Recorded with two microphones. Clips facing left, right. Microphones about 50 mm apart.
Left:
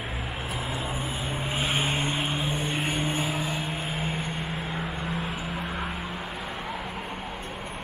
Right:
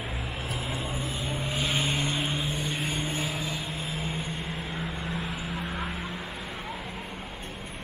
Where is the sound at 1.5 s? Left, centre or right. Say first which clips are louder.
Left 2 dB; centre.